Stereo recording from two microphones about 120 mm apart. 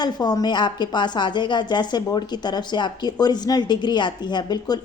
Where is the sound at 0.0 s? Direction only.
35° left (ahead or behind).